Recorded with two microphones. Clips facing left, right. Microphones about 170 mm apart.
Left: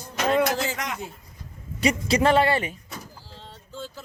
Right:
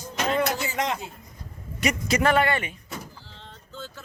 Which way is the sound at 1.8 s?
30° left (ahead or behind).